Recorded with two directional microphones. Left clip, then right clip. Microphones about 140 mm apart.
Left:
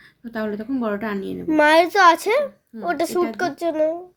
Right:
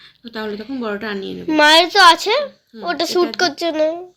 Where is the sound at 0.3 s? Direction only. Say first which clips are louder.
Even; 65° left (ahead or behind).